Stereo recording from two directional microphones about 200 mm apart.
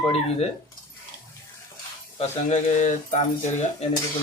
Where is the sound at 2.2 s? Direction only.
35° left (ahead or behind).